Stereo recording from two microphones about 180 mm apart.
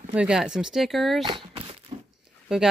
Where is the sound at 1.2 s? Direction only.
25° right (ahead or behind).